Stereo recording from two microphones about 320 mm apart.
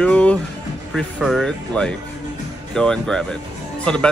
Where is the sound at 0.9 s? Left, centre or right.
Centre.